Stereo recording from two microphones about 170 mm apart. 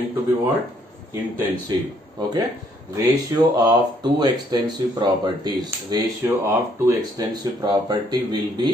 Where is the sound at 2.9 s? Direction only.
25° right (ahead or behind).